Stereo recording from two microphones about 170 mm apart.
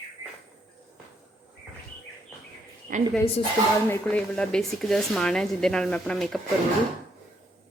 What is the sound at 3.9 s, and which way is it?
Speech, 5° left (ahead or behind).